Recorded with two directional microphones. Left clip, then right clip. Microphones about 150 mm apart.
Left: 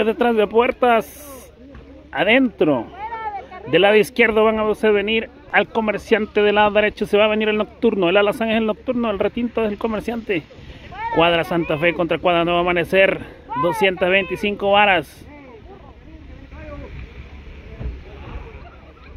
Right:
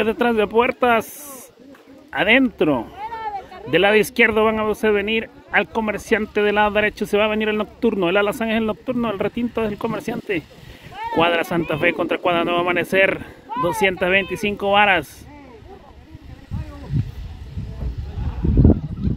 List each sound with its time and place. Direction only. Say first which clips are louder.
0.0 s speech: left 1 dB; 15° right (ahead or behind)
2.1 s speech: even; 15° right (ahead or behind)
3.0 s a sound: even; 90° right
3.7 s speech: left 2 dB; 15° right (ahead or behind)
10.9 s a sound: left 2 dB; 65° right (ahead or behind)
11.1 s speech: left 2 dB; 15° right (ahead or behind)